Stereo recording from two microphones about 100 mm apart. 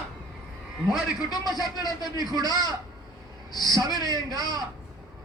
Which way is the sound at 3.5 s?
40° left (ahead or behind).